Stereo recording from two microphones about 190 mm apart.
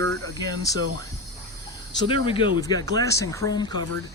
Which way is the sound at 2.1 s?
25° left (ahead or behind).